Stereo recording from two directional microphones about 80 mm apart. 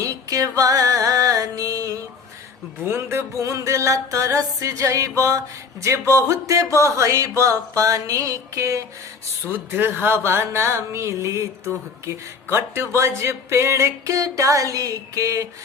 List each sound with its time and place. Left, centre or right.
0.0 s music: right
2.8 s speech: right
9.5 s speech: right